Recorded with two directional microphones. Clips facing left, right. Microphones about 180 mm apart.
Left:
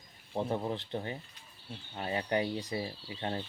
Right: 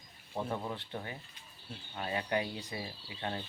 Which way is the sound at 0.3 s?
30° left (ahead or behind).